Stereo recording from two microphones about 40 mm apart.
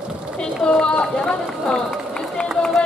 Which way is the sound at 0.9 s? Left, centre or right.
Left.